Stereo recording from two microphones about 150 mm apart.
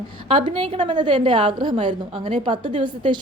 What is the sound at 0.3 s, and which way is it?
A woman's voice, 40° right (ahead or behind).